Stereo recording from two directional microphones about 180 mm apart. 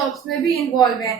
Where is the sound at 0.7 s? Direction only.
20° left (ahead or behind).